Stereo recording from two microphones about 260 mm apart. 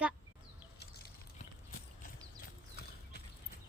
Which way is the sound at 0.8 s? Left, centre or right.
Left.